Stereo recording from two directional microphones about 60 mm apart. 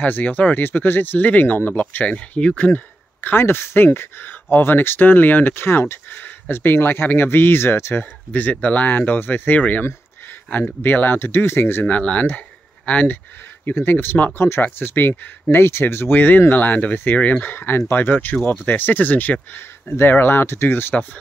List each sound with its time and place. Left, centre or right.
0.0 s speech: left
2.0 s speech: centre; by 5.9 s left
6.0 s speech: left
8.0 s speech: left
11.8 s speech: left
13.7 s speech: left
17.6 s speech: left